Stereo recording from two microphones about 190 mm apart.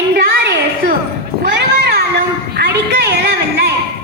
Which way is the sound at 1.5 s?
60° right (ahead or behind).